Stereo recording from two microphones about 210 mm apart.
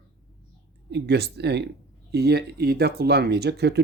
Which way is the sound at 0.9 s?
55° right (ahead or behind).